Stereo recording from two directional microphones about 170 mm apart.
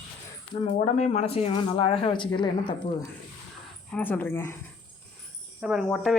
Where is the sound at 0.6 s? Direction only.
40° left (ahead or behind).